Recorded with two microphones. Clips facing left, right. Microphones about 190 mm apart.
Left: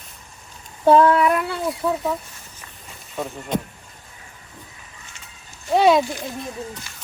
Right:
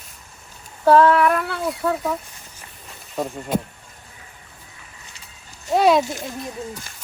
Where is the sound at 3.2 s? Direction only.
5° right (ahead or behind).